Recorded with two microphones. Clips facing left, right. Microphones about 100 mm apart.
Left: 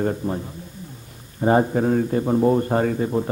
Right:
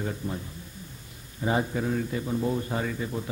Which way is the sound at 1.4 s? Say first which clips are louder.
Left 9 dB; 45° left (ahead or behind).